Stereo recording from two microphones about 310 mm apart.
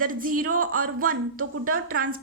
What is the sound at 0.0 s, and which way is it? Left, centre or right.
A woman's voice, right.